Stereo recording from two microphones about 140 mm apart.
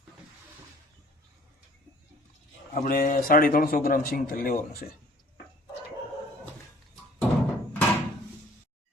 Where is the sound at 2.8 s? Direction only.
85° left.